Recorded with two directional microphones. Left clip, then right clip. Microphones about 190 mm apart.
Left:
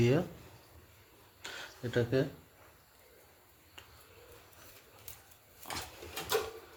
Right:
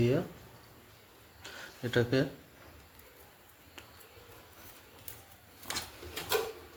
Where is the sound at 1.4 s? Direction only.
20° left (ahead or behind).